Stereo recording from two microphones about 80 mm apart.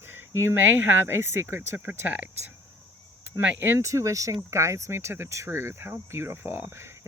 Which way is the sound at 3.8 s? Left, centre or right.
Right.